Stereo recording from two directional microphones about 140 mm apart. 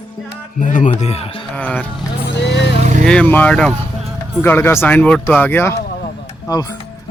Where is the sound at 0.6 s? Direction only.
65° left (ahead or behind); by 1.4 s 45° left (ahead or behind).